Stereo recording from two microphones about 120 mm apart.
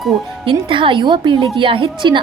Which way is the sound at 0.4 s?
45° right (ahead or behind).